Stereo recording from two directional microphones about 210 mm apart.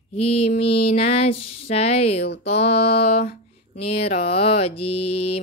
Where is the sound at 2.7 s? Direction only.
50° left (ahead or behind).